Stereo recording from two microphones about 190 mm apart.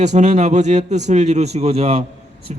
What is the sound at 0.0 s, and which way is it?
Speech, 35° right (ahead or behind).